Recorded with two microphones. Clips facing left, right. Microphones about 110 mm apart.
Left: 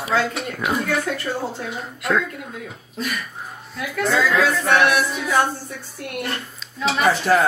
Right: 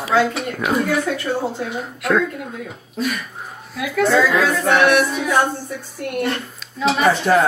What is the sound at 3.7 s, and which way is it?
Speech, 5° right (ahead or behind).